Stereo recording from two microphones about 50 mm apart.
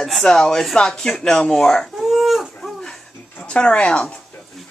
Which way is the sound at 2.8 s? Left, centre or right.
Centre.